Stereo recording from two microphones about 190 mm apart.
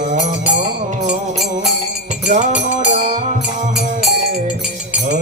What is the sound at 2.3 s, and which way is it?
Music, 40° right (ahead or behind).